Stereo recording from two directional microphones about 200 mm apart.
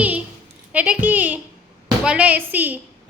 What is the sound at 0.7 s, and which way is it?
A woman's voice, 5° right (ahead or behind).